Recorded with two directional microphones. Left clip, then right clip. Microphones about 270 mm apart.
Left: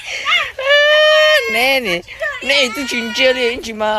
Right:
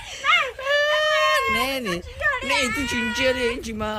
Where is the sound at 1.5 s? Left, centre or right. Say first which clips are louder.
Left 9 dB; centre.